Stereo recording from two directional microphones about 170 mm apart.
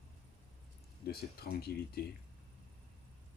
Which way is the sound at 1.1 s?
65° left (ahead or behind).